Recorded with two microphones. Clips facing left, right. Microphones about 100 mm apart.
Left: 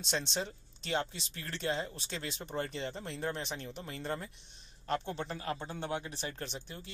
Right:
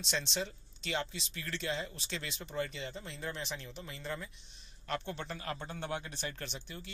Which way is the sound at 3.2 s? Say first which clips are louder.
Left 3 dB; 40° left (ahead or behind).